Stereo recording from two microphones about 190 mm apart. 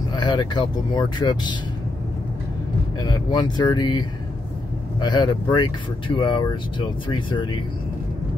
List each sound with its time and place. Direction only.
0.1 s speech: 20° left (ahead or behind)
3.0 s speech: 20° left (ahead or behind)
5.0 s speech: 20° left (ahead or behind)